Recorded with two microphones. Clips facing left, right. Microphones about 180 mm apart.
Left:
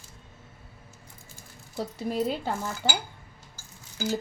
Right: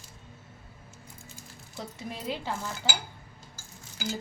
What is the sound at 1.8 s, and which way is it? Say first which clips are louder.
Speech: left 9 dB; 40° left (ahead or behind).